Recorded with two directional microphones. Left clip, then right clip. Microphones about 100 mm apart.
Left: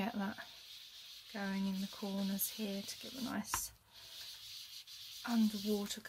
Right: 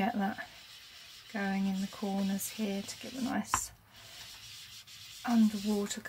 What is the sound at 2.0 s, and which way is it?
Speech, 10° left (ahead or behind).